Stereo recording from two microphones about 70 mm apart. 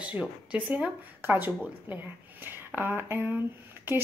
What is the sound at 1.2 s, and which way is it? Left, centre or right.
A woman's voice, right.